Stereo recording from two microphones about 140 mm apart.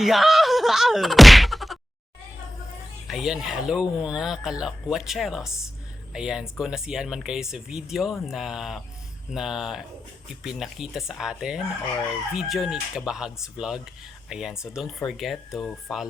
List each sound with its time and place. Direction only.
0.0 s speech: centre (ahead or behind)
3.1 s speech: centre (ahead or behind)